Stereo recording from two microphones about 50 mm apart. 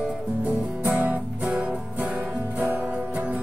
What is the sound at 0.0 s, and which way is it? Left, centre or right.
Music, right.